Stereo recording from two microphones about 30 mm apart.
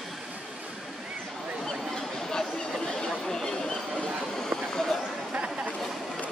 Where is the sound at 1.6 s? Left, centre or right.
Centre.